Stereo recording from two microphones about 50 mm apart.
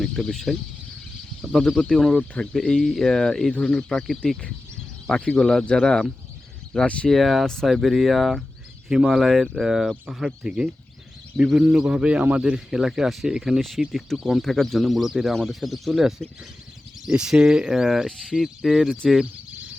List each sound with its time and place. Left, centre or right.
0.0 s speech: centre
1.8 s speech: centre
2.7 s speech: centre
3.1 s speech: centre
7.1 s speech: centre
7.4 s speech: centre
7.7 s a man's voice: centre
13.6 s speech: centre
14.4 s speech: centre
18.1 s speech: centre
18.3 s speech: centre